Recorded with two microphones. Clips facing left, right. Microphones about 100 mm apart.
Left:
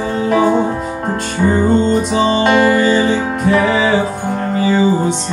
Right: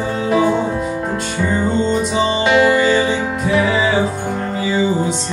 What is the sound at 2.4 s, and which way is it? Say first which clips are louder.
Music: even; 45° left (ahead or behind).